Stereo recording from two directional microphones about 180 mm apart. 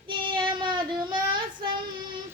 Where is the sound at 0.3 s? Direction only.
25° right (ahead or behind).